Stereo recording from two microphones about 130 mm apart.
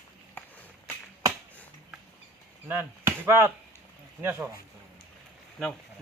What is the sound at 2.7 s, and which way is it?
Speech, 15° right (ahead or behind).